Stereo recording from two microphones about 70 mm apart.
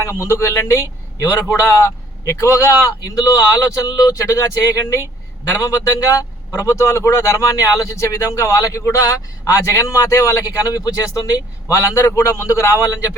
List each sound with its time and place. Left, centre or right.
0.0 s a man's voice: left
3.0 s speech: left
5.5 s speech: left
11.7 s speech: left